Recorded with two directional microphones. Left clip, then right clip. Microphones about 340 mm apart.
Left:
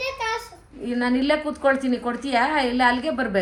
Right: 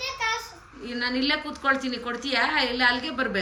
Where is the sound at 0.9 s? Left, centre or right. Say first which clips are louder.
Left 4 dB; centre.